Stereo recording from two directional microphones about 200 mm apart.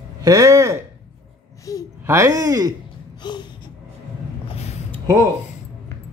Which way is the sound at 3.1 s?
20° left (ahead or behind).